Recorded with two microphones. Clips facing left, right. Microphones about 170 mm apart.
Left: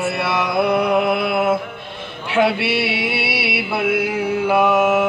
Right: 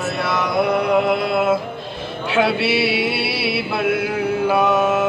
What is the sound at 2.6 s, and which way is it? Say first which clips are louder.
Music: right 2 dB; 55° left (ahead or behind).